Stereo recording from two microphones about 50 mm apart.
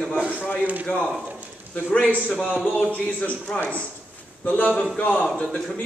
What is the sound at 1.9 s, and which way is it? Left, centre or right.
Speech, left.